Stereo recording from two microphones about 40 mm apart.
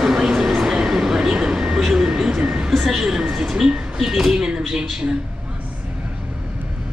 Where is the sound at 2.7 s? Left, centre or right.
Centre.